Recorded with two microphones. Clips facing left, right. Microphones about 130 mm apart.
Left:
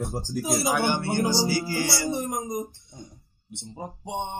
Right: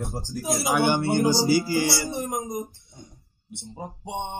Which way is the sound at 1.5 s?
15° right (ahead or behind).